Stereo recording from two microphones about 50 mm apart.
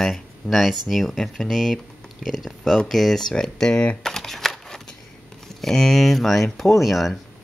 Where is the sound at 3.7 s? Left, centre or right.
Left.